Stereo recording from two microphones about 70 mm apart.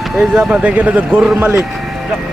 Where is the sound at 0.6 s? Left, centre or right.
Centre.